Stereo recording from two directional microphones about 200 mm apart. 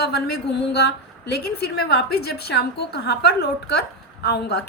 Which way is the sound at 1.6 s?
55° left (ahead or behind).